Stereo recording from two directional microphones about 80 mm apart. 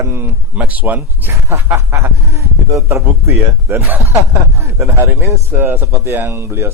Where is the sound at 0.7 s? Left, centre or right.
Right.